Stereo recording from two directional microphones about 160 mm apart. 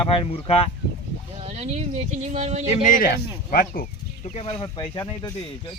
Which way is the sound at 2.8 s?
60° left (ahead or behind).